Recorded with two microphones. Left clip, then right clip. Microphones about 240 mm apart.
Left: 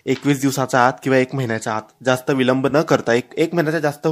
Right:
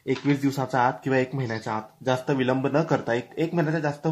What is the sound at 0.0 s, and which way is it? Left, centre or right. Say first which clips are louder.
Speech: left 6 dB; left.